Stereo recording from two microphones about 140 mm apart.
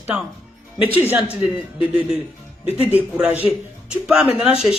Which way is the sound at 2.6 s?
45° left (ahead or behind).